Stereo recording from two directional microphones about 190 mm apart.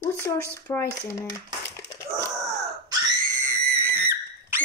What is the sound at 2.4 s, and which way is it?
Screaming, 15° right (ahead or behind).